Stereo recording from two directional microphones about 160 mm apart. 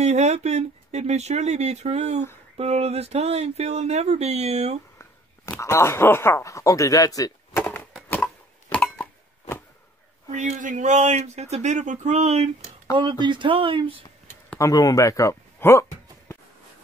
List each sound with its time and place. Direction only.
0.0 s speech: 45° right (ahead or behind)
4.9 s speech: 15° left (ahead or behind)
8.1 s a sound: 10° left (ahead or behind)
10.3 s speech: 50° right (ahead or behind)
13.2 s speech: 30° right (ahead or behind)
14.6 s speech: 20° left (ahead or behind)